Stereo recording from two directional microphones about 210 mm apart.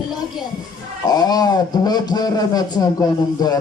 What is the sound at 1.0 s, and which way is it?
A man's voice, 20° left (ahead or behind).